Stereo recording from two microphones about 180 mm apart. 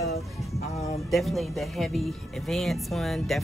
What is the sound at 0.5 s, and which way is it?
Speech, 35° left (ahead or behind).